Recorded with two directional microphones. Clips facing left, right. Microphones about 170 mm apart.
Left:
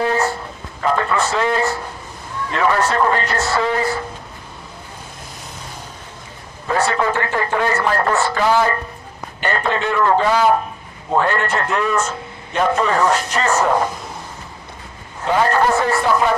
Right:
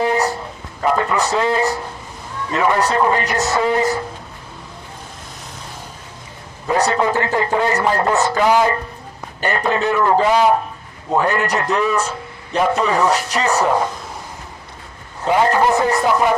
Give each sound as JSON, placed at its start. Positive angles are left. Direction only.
{"t": 0.0, "sound": "a sound", "side_deg": -15}
{"t": 0.9, "sound": "speech", "side_deg": -15}
{"t": 6.7, "sound": "a man's voice", "side_deg": -20}
{"t": 11.7, "sound": "speech", "side_deg": -5}
{"t": 15.3, "sound": "speech", "side_deg": -15}